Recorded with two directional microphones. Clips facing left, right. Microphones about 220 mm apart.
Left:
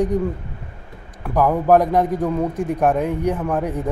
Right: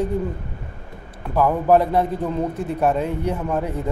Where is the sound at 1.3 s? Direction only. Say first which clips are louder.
Left 1 dB; 15° left (ahead or behind).